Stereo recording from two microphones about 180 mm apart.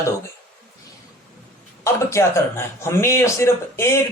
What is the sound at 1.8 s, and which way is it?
A man's voice, 15° left (ahead or behind).